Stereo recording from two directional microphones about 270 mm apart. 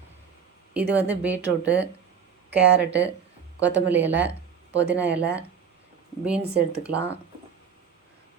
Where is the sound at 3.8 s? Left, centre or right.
Centre.